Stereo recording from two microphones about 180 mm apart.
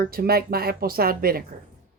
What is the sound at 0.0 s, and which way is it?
Speech, 55° right (ahead or behind).